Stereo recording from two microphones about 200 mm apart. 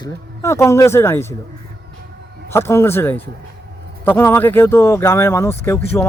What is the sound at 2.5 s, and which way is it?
A man's voice, 10° left (ahead or behind).